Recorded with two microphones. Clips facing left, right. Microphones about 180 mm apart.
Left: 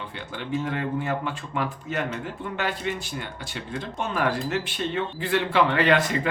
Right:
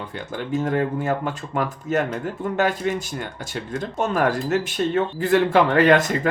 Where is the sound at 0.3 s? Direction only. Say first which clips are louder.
Right 6 dB; 45° right (ahead or behind).